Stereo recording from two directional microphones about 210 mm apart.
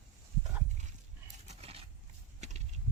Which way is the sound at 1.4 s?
30° right (ahead or behind).